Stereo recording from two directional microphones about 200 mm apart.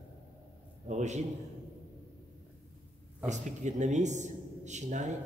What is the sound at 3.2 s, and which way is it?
Speech, 35° right (ahead or behind).